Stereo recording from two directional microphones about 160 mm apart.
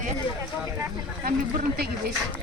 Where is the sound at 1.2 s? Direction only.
65° right (ahead or behind).